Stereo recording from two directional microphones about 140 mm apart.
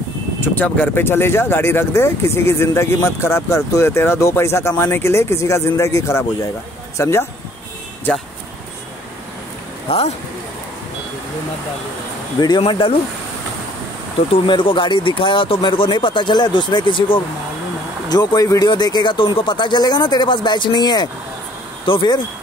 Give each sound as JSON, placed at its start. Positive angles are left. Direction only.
{"t": 0.4, "sound": "speech", "side_deg": 15}
{"t": 9.8, "sound": "speech", "side_deg": 45}
{"t": 12.4, "sound": "speech", "side_deg": 30}
{"t": 14.3, "sound": "speech", "side_deg": 35}